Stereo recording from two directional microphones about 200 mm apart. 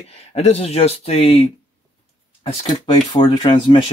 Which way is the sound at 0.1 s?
30° left (ahead or behind).